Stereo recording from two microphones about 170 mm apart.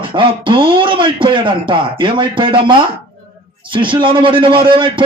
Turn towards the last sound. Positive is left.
turn(degrees=-30)  # may be behind; listen again after turning